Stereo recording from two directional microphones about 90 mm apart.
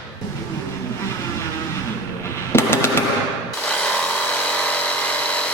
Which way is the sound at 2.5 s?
25° left (ahead or behind).